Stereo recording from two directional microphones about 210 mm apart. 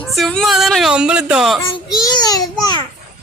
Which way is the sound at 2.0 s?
20° left (ahead or behind).